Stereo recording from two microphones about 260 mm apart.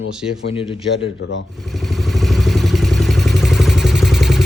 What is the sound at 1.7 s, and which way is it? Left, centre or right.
Vehicle, centre.